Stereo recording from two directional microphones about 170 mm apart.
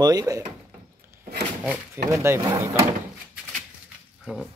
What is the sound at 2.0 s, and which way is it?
Speech, 15° right (ahead or behind).